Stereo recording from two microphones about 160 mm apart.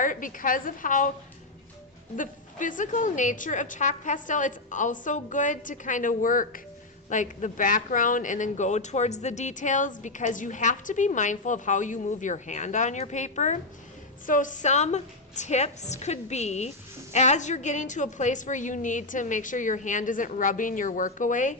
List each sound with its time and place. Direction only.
0.0 s a woman's voice: 55° left (ahead or behind)
2.1 s a woman's voice: 55° left (ahead or behind)